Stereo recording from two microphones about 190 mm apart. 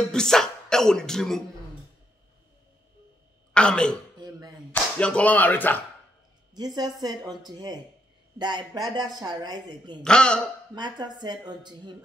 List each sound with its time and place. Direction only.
0.1 s speech: 5° left (ahead or behind)
3.5 s a man's voice: 5° left (ahead or behind)
6.5 s speech: 20° right (ahead or behind)
10.0 s a man's voice: 5° left (ahead or behind)
10.7 s speech: 20° right (ahead or behind)